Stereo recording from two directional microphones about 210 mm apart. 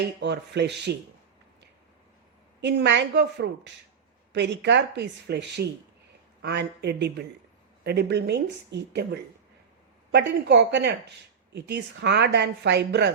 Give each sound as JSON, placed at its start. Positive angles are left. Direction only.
{"t": 0.0, "sound": "speech", "side_deg": -55}
{"t": 2.6, "sound": "speech", "side_deg": -55}
{"t": 10.1, "sound": "speech", "side_deg": -55}